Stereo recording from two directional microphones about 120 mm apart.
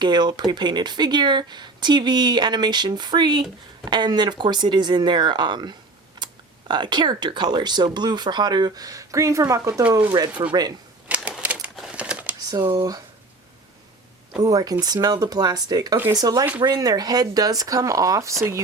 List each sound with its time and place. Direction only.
0.0 s speech: 35° right (ahead or behind)
11.1 s typewriter: 5° right (ahead or behind)
14.4 s speech: 30° right (ahead or behind)